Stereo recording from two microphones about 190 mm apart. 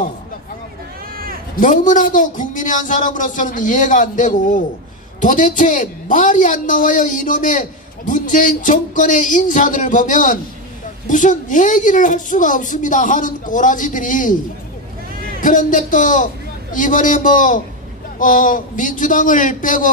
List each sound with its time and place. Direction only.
1.1 s cat: 50° right (ahead or behind)
1.6 s a man's voice: 45° left (ahead or behind)
15.4 s a man's voice: 45° left (ahead or behind)